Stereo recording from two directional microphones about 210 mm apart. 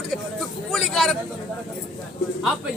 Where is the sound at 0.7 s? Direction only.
Centre (ahead or behind).